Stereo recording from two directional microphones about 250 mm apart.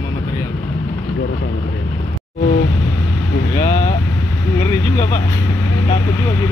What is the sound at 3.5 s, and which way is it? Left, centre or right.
Speech, centre.